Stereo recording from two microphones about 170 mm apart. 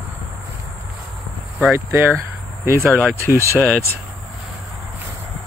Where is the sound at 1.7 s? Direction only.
15° right (ahead or behind).